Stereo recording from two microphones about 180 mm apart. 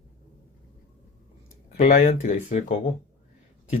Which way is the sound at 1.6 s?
40° left (ahead or behind).